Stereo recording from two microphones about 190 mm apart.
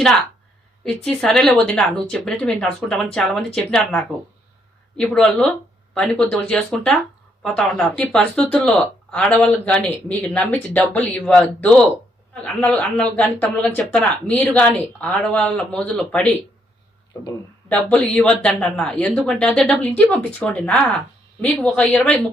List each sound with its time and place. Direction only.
0.9 s speech: 5° left (ahead or behind)
17.7 s speech: 10° left (ahead or behind)